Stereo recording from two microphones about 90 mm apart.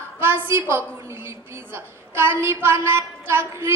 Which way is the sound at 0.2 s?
25° right (ahead or behind).